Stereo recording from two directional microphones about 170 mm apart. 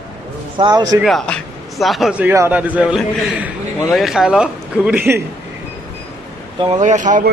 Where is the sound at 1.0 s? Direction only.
5° left (ahead or behind).